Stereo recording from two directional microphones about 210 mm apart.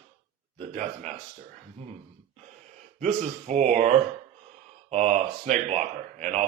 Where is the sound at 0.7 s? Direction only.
35° right (ahead or behind).